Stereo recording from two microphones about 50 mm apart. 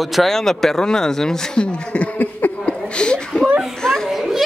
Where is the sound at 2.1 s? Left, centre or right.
Left.